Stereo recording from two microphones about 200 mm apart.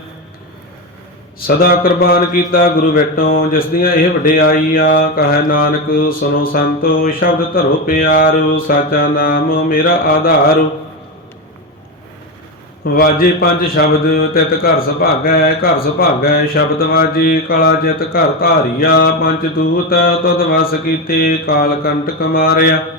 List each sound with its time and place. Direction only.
1.4 s a man's voice: 50° left (ahead or behind)
12.9 s a man's voice: 50° left (ahead or behind)